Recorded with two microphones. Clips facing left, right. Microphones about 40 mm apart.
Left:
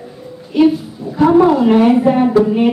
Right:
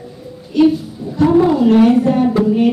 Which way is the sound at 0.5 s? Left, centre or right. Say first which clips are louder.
Even; centre.